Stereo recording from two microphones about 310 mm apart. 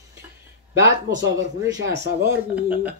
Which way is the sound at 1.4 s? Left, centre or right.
Right.